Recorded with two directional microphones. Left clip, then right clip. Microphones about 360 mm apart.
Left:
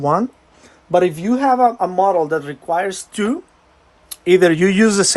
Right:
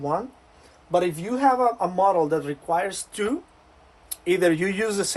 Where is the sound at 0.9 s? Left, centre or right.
Left.